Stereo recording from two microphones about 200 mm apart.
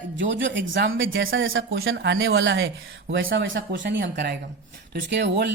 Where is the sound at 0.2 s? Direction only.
70° right (ahead or behind).